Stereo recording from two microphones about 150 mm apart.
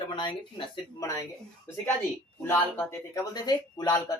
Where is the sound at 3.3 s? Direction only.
25° left (ahead or behind).